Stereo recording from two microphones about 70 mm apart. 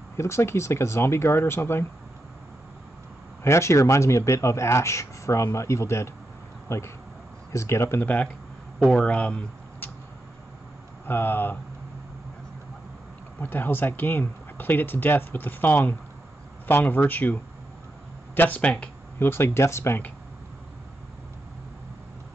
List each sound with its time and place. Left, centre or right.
0.2 s speech: left
3.4 s speech: left
8.0 s speech: left
11.1 s speech: left
13.4 s speech: left
18.6 s speech: centre
19.1 s speech: left